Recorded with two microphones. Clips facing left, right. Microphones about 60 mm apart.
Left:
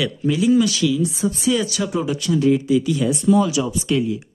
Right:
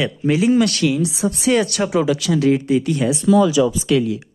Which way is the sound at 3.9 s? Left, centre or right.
Right.